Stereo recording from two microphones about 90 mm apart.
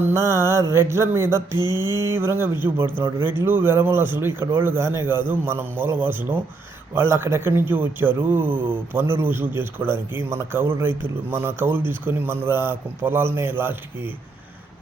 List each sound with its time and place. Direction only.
0.1 s mantra: 30° right (ahead or behind)
0.7 s a man's voice: 30° right (ahead or behind)
1.5 s mantra: 50° left (ahead or behind)
2.0 s a man's voice: 30° right (ahead or behind)